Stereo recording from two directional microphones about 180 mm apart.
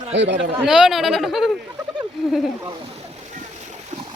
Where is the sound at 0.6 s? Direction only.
5° right (ahead or behind).